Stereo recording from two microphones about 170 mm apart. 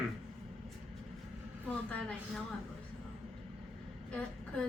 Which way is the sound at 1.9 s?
5° left (ahead or behind).